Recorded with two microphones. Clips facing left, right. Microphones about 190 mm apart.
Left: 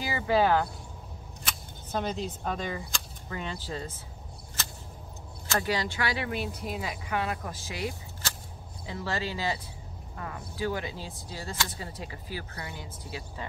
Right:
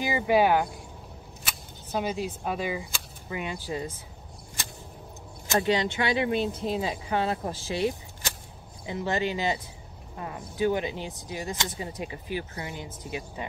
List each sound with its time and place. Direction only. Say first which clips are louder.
0.0 s speech: right 3 dB; 15° right (ahead or behind)
5.5 s speech: right 5 dB; 20° right (ahead or behind)
8.2 s a sound: right 2 dB; 15° right (ahead or behind)
8.8 s speech: right 5 dB; 20° right (ahead or behind)